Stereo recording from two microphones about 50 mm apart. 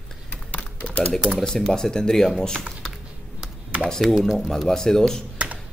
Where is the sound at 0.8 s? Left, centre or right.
Left.